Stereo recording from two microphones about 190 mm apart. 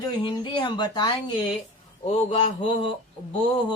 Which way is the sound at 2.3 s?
35° left (ahead or behind).